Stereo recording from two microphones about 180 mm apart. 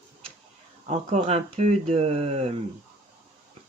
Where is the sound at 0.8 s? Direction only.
35° right (ahead or behind).